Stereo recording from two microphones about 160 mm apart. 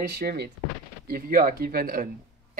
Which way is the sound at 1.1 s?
65° right (ahead or behind).